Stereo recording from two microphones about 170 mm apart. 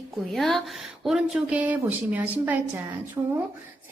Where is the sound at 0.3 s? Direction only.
Centre (ahead or behind).